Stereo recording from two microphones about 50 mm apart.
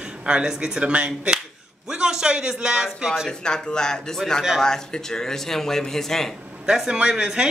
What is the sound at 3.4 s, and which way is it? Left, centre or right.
Speech, centre.